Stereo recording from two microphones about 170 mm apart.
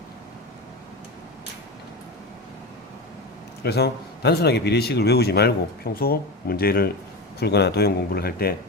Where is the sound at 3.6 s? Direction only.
75° left (ahead or behind).